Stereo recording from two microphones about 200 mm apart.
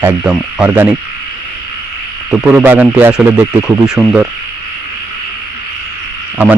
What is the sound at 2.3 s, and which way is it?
Speech, 5° right (ahead or behind).